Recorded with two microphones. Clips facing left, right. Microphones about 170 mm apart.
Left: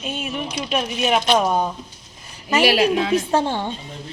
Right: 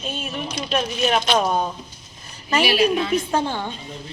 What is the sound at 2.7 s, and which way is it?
Speech, 90° left.